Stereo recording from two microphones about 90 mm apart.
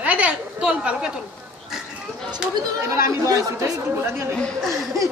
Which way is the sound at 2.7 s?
35° right (ahead or behind).